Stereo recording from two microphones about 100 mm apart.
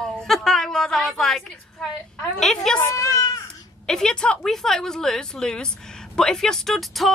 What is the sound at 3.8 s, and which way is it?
A woman's voice, 5° left (ahead or behind).